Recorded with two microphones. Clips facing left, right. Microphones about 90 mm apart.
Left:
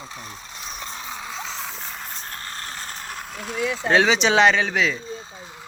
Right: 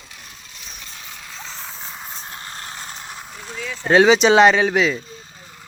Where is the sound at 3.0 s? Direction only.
5° right (ahead or behind).